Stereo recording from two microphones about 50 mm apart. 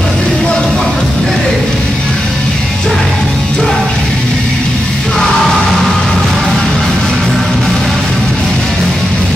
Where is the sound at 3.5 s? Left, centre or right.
Centre.